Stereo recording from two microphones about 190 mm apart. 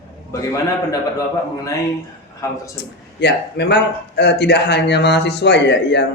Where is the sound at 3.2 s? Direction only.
60° left (ahead or behind).